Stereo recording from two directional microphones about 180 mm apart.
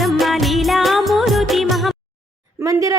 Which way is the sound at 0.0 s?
Centre (ahead or behind).